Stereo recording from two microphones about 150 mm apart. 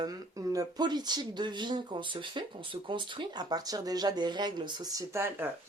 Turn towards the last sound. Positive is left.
turn(degrees=-15)  # may be behind; listen again after turning